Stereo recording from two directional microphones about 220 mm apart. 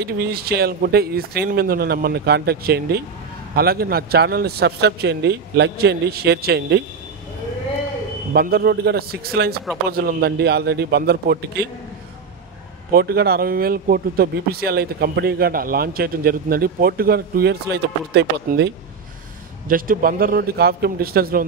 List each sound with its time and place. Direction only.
0.0 s speech: 45° right (ahead or behind)
8.3 s speech: 45° right (ahead or behind)
12.9 s speech: 45° right (ahead or behind)
19.7 s speech: 40° right (ahead or behind)